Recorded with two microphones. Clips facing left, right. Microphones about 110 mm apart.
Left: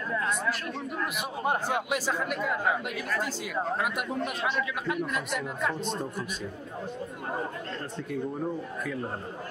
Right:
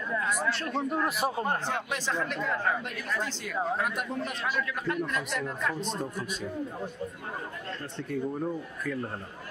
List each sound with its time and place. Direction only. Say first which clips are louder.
0.5 s a man's voice: right 2 dB; 35° right (ahead or behind)
1.4 s speech: left 2 dB; 10° left (ahead or behind)